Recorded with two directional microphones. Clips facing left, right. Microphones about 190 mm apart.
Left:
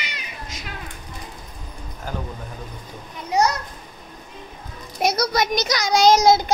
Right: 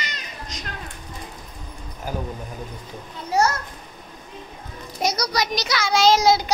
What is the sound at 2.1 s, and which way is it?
Speech, 10° right (ahead or behind).